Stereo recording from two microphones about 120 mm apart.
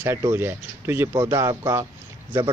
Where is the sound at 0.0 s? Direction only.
25° right (ahead or behind).